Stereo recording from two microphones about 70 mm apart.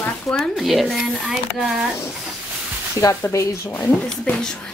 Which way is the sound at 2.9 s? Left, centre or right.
Left.